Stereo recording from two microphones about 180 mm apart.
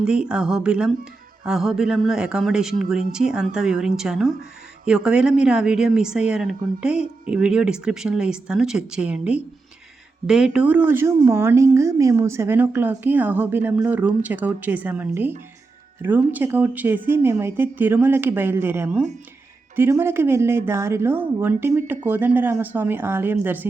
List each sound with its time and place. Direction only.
0.0 s a woman's voice: 5° right (ahead or behind)